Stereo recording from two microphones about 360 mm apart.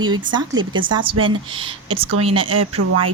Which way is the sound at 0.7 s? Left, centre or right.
Right.